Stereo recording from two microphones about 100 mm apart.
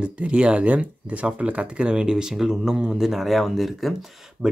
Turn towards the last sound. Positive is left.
turn(degrees=0)  # may be behind; listen again after turning